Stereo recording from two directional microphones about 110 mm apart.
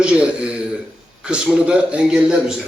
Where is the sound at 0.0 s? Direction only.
10° right (ahead or behind).